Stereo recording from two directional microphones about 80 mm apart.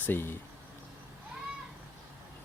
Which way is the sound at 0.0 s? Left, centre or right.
Left.